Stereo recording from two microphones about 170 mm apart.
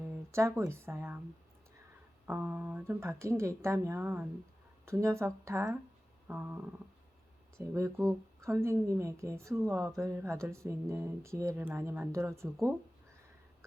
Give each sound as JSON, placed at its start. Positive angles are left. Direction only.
{"t": 0.0, "sound": "speech", "side_deg": -15}
{"t": 2.2, "sound": "a woman's voice", "side_deg": -10}
{"t": 6.2, "sound": "a sound", "side_deg": -10}
{"t": 7.7, "sound": "a woman's voice", "side_deg": -15}